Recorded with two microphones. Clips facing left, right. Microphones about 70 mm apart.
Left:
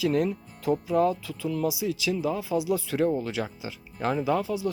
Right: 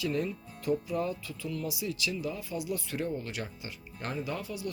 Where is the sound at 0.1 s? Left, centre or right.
Left.